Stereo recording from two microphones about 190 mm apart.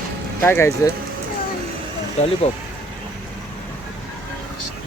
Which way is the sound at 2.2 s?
35° left (ahead or behind).